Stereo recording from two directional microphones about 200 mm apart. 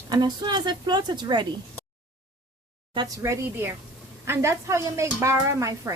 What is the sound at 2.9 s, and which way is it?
Speech, 20° right (ahead or behind).